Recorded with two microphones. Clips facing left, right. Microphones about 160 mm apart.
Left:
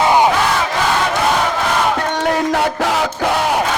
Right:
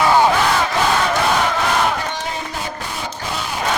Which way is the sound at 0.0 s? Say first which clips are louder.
Left 1 dB; 15° left (ahead or behind).